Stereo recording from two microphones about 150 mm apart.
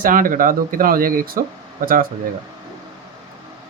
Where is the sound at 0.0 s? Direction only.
65° right (ahead or behind).